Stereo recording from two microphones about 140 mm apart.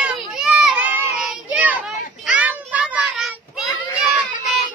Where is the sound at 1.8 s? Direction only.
10° right (ahead or behind).